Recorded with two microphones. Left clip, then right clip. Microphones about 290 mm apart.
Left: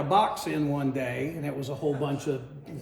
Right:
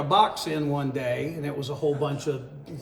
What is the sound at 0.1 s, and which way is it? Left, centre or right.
Speech, centre.